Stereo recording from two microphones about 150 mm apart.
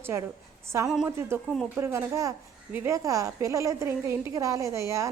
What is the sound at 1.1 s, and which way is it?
A woman's voice, 15° right (ahead or behind).